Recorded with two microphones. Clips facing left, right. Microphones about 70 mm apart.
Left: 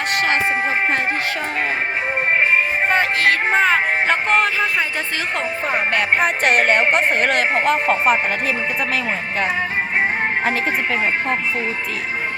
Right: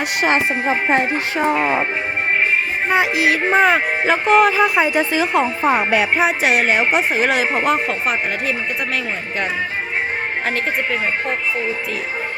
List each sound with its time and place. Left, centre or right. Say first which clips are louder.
0.2 s speech: right 2 dB; centre
2.9 s speech: right 2 dB; centre